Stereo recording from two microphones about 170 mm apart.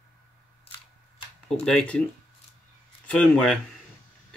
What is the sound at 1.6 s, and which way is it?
Speech, 5° left (ahead or behind).